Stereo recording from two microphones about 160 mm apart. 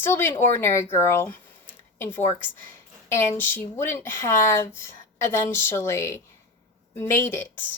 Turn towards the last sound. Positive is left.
turn(degrees=15)  # may be behind; listen again after turning